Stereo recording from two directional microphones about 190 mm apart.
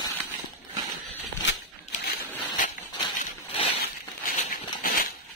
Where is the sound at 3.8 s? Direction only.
50° left (ahead or behind).